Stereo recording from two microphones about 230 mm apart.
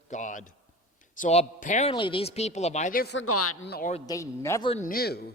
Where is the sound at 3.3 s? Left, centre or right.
Left.